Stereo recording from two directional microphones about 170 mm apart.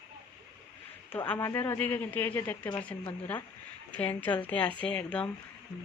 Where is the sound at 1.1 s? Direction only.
15° left (ahead or behind).